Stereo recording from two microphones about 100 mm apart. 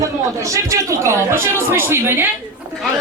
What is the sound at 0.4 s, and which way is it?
A woman's voice, 30° right (ahead or behind).